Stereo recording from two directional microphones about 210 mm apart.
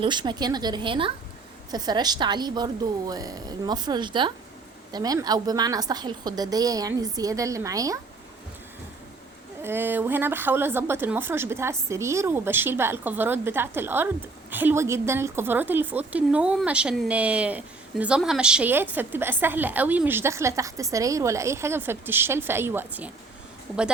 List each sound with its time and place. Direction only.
0.0 s a woman's voice: 20° right (ahead or behind)
9.6 s a woman's voice: 10° right (ahead or behind)